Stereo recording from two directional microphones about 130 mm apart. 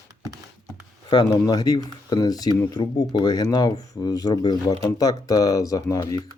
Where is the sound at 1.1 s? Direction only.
35° left (ahead or behind).